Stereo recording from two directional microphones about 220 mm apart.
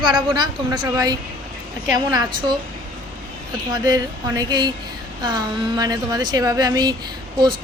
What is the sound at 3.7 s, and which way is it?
A woman's voice, 15° right (ahead or behind).